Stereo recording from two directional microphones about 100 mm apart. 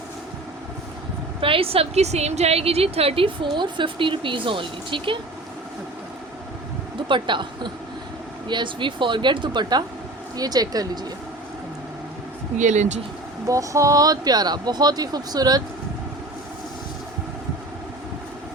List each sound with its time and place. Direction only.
1.4 s a woman's voice: 65° right (ahead or behind); by 3.2 s 85° right
3.4 s speech: 55° right (ahead or behind)
7.1 s speech: 55° right (ahead or behind)
13.5 s speech: 35° right (ahead or behind)